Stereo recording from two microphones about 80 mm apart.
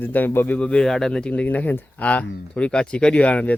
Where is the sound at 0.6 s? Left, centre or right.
Centre.